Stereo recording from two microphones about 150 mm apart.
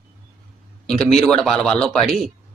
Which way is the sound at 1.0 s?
5° left (ahead or behind).